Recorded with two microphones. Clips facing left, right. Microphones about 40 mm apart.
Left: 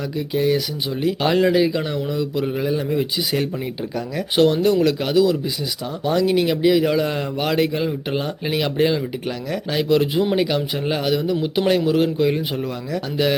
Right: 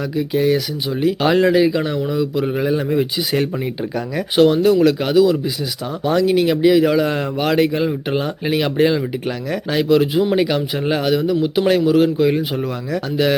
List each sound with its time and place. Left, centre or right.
0.2 s a man's voice: centre
4.4 s a man's voice: centre